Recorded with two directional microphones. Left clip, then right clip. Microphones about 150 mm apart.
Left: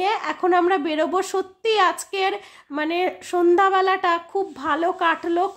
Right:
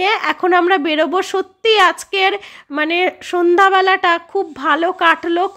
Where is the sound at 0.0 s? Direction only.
30° right (ahead or behind).